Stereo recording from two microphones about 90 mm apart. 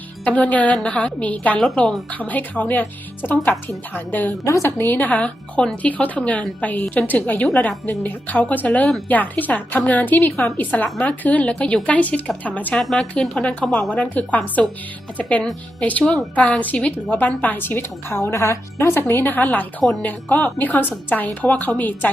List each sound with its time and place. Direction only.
0.3 s a woman's voice: 15° left (ahead or behind)
4.4 s a woman's voice: 35° left (ahead or behind)
4.9 s a woman's voice: 20° left (ahead or behind)
13.9 s a woman's voice: 15° left (ahead or behind)